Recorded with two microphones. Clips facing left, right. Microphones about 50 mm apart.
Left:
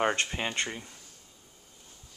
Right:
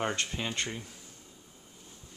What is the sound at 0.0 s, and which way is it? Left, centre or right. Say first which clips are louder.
Speech: left 4 dB; left.